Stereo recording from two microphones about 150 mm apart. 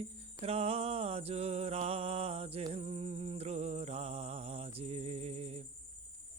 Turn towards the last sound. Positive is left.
turn(degrees=-45)  # may be behind; listen again after turning